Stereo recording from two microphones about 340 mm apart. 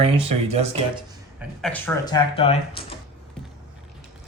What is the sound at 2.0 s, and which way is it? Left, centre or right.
Speech, centre.